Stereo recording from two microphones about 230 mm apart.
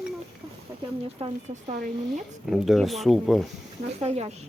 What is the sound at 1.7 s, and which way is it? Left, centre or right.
Speech, right.